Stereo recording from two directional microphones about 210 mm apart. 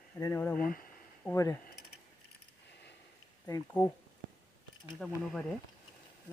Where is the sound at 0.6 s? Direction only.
40° left (ahead or behind).